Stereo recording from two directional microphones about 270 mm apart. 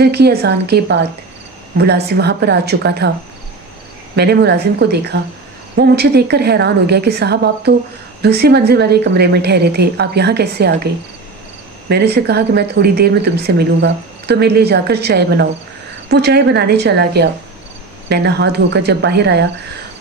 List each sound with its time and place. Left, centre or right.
0.0 s speech: right
4.1 s speech: right
11.9 s speech: right